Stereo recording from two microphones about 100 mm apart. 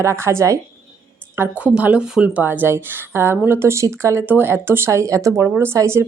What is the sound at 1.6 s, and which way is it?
Speech, 15° right (ahead or behind).